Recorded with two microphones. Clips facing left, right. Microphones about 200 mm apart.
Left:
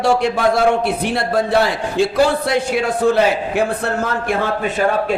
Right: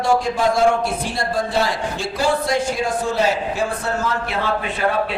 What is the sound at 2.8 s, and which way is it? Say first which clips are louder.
Speech: left 5 dB; 60° left (ahead or behind).